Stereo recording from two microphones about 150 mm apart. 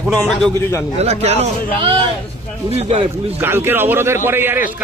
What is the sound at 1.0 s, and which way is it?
Speech, 45° right (ahead or behind).